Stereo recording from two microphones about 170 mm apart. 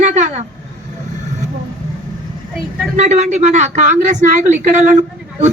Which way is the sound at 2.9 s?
45° right (ahead or behind).